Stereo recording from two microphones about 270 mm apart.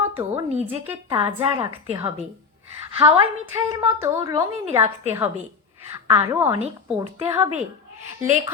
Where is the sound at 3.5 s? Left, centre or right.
Centre.